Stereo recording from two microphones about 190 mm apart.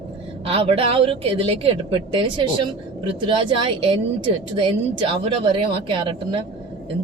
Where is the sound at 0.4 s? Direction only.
30° right (ahead or behind).